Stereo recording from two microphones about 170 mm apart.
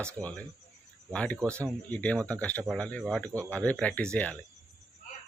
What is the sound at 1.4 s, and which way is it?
Speech, 15° right (ahead or behind).